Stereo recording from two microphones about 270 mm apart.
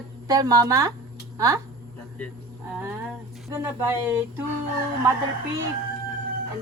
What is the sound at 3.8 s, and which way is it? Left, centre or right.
Speech, centre.